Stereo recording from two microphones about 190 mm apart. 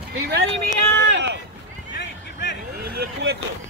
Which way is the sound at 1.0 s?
70° right (ahead or behind).